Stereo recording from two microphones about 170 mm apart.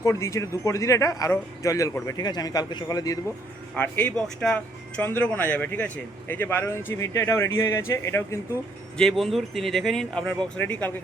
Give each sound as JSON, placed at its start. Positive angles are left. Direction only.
{"t": 0.0, "sound": "speech", "side_deg": 15}
{"t": 3.8, "sound": "speech", "side_deg": 10}
{"t": 9.0, "sound": "speech", "side_deg": 0}